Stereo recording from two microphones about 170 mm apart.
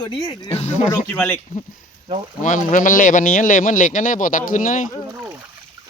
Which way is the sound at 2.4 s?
50° left (ahead or behind).